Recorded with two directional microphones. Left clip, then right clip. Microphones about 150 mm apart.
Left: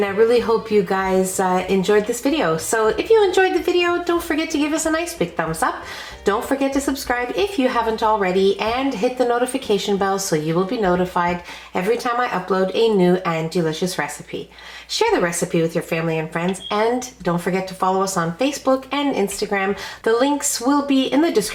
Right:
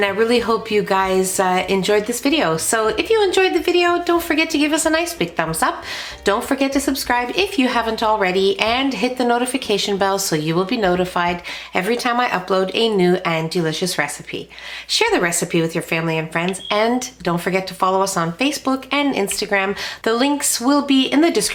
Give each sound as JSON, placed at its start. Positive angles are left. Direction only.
{"t": 0.0, "sound": "a woman's voice", "side_deg": -35}